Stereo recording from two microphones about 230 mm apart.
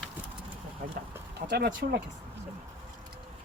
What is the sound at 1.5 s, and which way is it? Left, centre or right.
Speech, right.